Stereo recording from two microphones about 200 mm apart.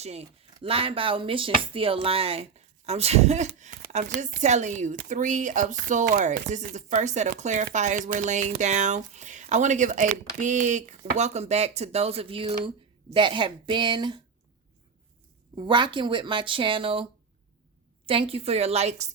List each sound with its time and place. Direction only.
0.0 s speech: 30° right (ahead or behind)
15.5 s speech: 25° right (ahead or behind)